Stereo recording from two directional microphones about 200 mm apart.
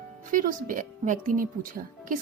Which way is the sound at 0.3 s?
40° right (ahead or behind).